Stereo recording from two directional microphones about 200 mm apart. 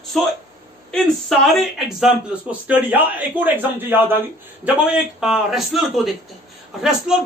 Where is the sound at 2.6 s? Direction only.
10° right (ahead or behind).